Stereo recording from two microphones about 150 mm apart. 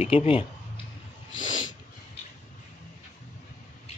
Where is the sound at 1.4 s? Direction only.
55° left (ahead or behind).